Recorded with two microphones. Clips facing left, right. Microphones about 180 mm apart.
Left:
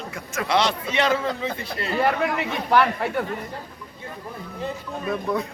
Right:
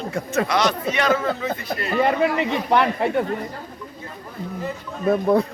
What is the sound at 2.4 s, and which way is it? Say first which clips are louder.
Speech: right 1 dB; 20° right (ahead or behind).